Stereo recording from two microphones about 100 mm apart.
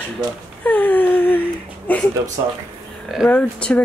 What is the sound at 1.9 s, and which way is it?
Speech, 15° left (ahead or behind).